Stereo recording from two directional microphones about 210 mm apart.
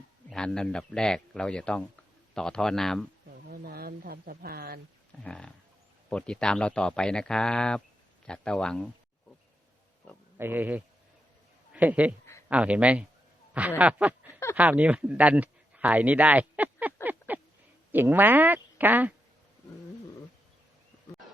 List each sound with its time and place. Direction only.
0.3 s speech: 5° left (ahead or behind)
3.2 s a sound: 45° right (ahead or behind)
5.2 s speech: 5° left (ahead or behind)
10.3 s speech: 10° right (ahead or behind)
13.5 s a sound: 5° right (ahead or behind)
14.5 s speech: 5° right (ahead or behind)